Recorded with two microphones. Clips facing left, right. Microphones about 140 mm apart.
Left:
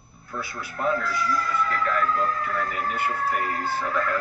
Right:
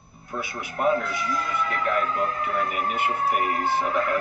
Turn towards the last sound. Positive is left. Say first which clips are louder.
# right 3 dB
turn(degrees=-20)  # may be behind; listen again after turning